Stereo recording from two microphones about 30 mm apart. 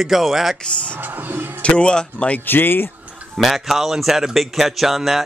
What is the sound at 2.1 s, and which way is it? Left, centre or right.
Speech, left.